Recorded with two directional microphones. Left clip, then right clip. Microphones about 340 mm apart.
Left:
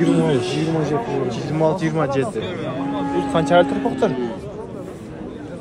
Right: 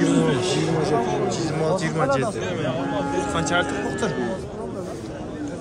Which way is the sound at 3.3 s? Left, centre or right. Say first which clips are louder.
Left 10 dB; centre.